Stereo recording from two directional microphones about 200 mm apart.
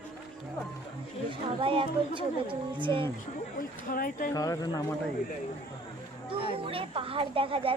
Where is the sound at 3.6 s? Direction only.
45° left (ahead or behind).